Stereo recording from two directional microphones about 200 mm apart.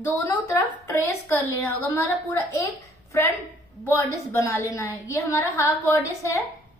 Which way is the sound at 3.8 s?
10° left (ahead or behind).